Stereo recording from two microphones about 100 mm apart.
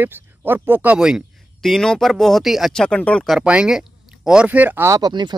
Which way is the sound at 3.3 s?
10° right (ahead or behind).